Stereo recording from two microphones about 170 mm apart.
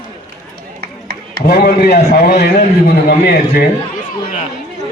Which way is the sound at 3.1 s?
60° left (ahead or behind).